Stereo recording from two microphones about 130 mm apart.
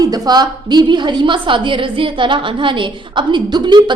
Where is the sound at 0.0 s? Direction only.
30° right (ahead or behind).